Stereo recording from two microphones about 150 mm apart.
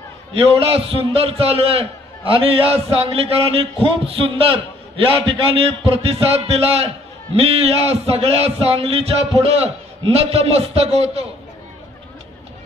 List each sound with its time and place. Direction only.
0.3 s a man's voice: 40° right (ahead or behind)